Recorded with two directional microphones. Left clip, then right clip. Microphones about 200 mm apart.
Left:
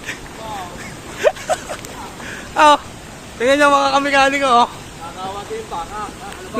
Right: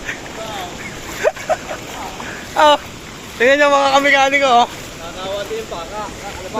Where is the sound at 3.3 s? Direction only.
5° left (ahead or behind); by 4.7 s 25° left (ahead or behind).